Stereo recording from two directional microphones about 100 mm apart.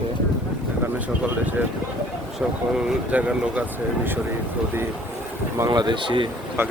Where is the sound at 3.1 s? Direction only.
15° right (ahead or behind).